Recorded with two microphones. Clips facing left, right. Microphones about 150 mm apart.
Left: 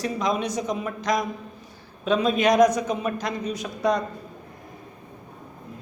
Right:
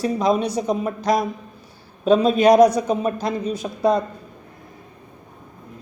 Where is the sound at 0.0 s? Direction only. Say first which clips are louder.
Right 6 dB; 35° right (ahead or behind).